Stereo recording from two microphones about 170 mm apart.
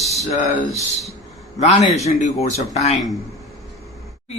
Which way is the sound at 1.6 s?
40° left (ahead or behind).